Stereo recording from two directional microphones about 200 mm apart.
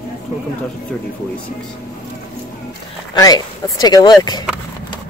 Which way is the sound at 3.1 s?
20° left (ahead or behind).